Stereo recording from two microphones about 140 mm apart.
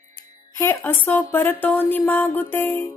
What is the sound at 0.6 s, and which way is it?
A woman's voice, 15° left (ahead or behind).